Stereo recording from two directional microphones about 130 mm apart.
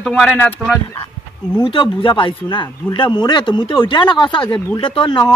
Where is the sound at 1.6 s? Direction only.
40° left (ahead or behind).